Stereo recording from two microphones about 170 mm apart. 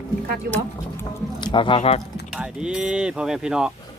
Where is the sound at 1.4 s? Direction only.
25° left (ahead or behind).